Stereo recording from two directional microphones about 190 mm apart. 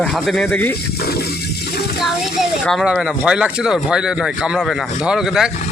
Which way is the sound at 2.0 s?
Centre (ahead or behind).